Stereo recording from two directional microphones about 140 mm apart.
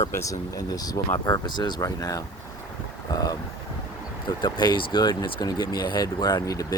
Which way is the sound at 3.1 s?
25° left (ahead or behind).